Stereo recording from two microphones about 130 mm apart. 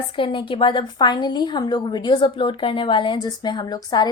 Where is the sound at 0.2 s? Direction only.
40° left (ahead or behind).